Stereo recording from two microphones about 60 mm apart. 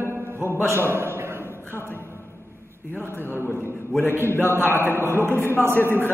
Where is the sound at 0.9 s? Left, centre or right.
Right.